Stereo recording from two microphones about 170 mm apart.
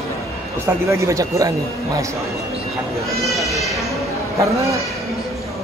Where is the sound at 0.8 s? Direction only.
15° right (ahead or behind).